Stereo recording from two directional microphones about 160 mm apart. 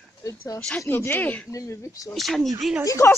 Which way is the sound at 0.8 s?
15° left (ahead or behind).